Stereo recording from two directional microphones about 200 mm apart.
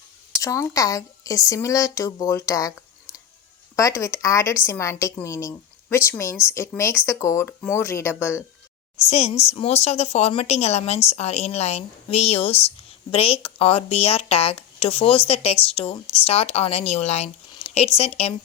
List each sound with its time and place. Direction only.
0.3 s speech: 15° left (ahead or behind)
3.8 s speech: 15° left (ahead or behind)
9.0 s a woman's voice: 30° left (ahead or behind)